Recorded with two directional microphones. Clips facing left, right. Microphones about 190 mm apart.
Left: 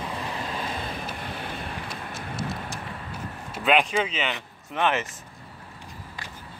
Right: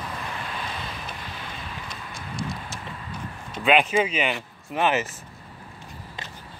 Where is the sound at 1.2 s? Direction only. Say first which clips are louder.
Left 4 dB; 55° left (ahead or behind).